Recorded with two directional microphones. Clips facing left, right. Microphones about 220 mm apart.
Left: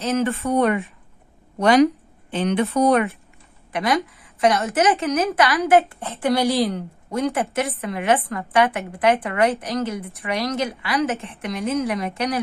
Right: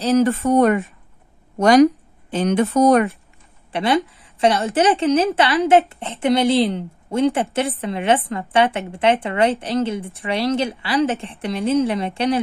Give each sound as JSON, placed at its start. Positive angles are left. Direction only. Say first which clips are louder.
{"t": 0.0, "sound": "speech", "louder": "right 5 dB", "side_deg": -40}
{"t": 3.7, "sound": "a woman's voice", "louder": "right 3 dB", "side_deg": -30}